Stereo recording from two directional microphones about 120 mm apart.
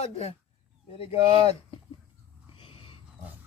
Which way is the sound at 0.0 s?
60° left (ahead or behind).